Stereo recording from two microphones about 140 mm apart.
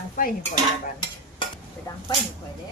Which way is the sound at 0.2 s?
75° left (ahead or behind).